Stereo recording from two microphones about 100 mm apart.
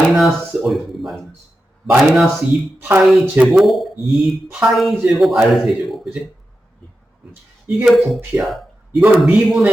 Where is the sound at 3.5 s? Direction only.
Centre (ahead or behind).